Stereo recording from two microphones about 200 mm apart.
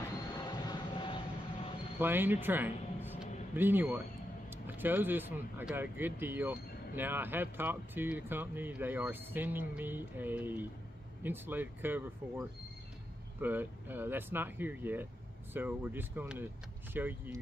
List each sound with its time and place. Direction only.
0.4 s vehicle: 25° left (ahead or behind)
2.0 s speech: 10° right (ahead or behind)